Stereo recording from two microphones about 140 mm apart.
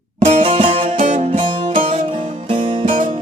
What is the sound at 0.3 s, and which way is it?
Music, 50° right (ahead or behind).